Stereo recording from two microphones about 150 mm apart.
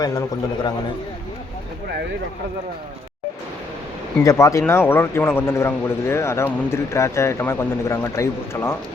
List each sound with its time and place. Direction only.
0.0 s a man's voice: 25° left (ahead or behind)
4.2 s a man's voice: 20° left (ahead or behind)